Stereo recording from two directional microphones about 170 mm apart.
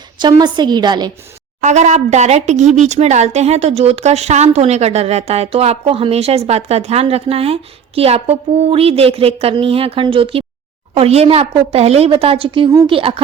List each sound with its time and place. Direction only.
0.2 s a woman's voice: 25° right (ahead or behind)
1.6 s speech: 45° right (ahead or behind)